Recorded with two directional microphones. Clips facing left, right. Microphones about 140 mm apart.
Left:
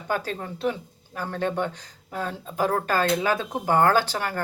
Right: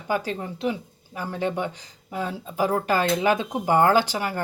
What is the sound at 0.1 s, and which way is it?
Speech, 10° right (ahead or behind).